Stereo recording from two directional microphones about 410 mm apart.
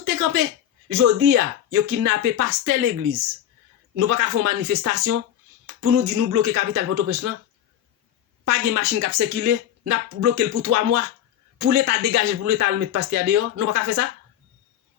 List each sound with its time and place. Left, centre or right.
0.0 s a sound: right
0.9 s speech: right
3.9 s speech: right
8.4 s speech: right